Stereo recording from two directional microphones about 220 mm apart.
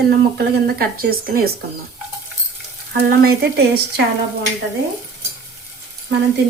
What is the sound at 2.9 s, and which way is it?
Speech, 45° right (ahead or behind).